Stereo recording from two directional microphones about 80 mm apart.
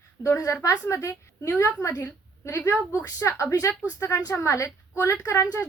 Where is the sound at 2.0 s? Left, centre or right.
Left.